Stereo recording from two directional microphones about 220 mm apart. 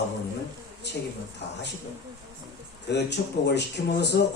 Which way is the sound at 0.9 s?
50° left (ahead or behind).